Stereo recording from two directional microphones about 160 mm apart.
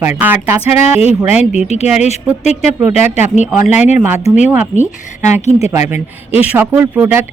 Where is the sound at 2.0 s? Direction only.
45° left (ahead or behind).